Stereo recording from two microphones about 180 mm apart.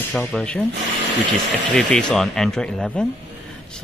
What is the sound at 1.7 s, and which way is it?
Speech, 5° left (ahead or behind).